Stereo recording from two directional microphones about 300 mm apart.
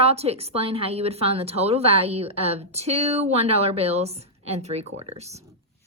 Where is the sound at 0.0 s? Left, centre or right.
Centre.